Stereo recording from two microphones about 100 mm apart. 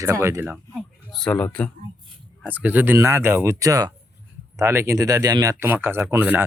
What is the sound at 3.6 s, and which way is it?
Speech, 35° right (ahead or behind).